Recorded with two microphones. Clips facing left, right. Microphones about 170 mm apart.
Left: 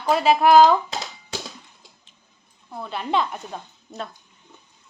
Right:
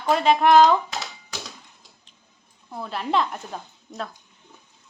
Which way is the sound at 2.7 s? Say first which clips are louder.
Even; centre (ahead or behind).